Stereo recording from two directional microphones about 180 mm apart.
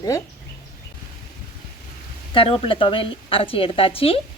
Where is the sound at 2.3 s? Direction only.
30° left (ahead or behind).